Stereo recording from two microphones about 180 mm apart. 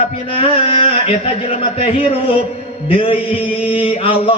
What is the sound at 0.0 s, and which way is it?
A man's voice, 30° left (ahead or behind).